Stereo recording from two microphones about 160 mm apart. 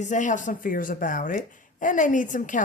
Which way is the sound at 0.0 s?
50° left (ahead or behind).